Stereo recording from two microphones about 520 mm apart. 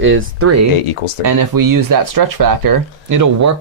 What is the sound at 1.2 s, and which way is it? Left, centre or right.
Speech, right.